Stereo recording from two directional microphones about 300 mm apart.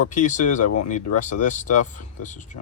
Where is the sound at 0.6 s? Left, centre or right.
Left.